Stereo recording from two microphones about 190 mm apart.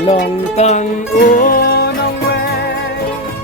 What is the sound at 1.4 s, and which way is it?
Music, 50° left (ahead or behind).